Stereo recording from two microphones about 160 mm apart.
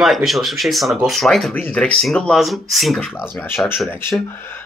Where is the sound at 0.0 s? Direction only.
Centre (ahead or behind).